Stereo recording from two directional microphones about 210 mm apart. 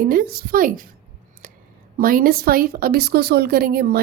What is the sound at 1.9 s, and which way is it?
A woman's voice, 45° right (ahead or behind).